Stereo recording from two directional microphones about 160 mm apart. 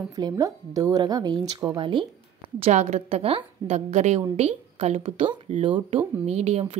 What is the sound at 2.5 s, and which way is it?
Speech, 40° right (ahead or behind).